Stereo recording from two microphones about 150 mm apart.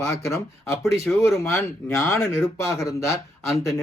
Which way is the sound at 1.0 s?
Centre (ahead or behind).